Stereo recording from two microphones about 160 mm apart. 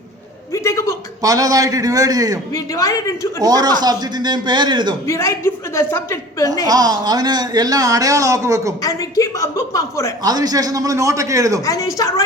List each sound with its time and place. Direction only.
0.5 s a sound: 20° left (ahead or behind)
1.2 s speech: 20° right (ahead or behind)
2.5 s a woman's voice: 20° left (ahead or behind)
3.4 s speech: 25° right (ahead or behind)
5.0 s a woman's voice: 20° left (ahead or behind)
6.7 s speech: 25° right (ahead or behind)
8.8 s a woman's voice: 20° left (ahead or behind)
10.2 s speech: 25° right (ahead or behind)
11.6 s a woman's voice: 20° left (ahead or behind)